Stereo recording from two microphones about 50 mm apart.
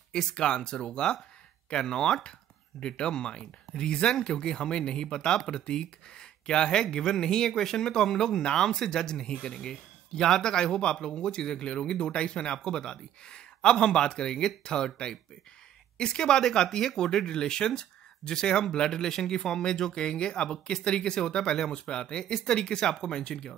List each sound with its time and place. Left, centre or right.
0.1 s speech: centre